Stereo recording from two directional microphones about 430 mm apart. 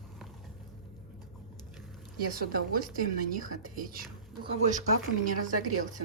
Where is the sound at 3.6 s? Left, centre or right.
Centre.